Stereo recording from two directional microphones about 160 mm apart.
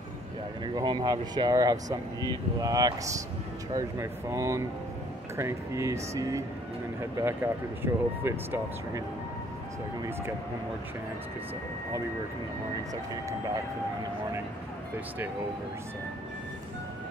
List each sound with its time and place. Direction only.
0.7 s speech: 25° right (ahead or behind)